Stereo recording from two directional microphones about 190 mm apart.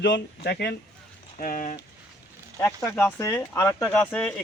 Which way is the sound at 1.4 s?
45° left (ahead or behind).